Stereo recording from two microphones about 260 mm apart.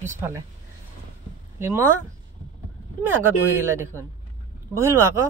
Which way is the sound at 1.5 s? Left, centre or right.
Centre.